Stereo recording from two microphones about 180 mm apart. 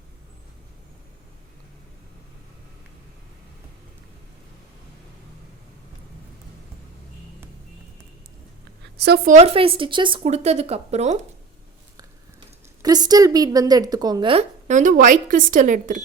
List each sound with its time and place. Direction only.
9.0 s a woman's voice: 60° right (ahead or behind)
9.3 s a woman's voice: 35° right (ahead or behind)
12.8 s a woman's voice: 20° right (ahead or behind)
14.7 s speech: 45° right (ahead or behind)